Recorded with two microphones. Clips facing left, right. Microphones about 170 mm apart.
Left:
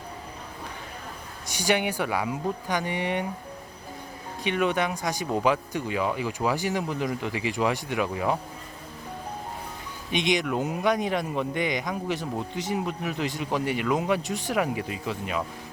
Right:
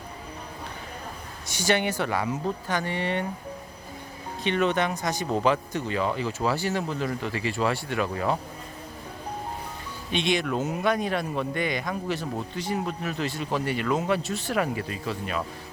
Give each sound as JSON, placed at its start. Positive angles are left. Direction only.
{"t": 1.5, "sound": "speech", "side_deg": 10}
{"t": 4.4, "sound": "speech", "side_deg": 10}
{"t": 10.1, "sound": "speech", "side_deg": 15}